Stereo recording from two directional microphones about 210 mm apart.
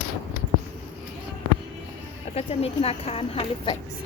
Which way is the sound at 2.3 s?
30° left (ahead or behind).